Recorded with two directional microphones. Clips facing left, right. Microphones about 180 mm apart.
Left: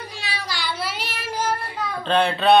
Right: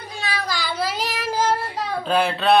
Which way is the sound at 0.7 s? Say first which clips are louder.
Right 3 dB; 40° right (ahead or behind).